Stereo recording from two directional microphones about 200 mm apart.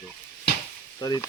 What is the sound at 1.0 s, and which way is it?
Sizzle, 20° left (ahead or behind).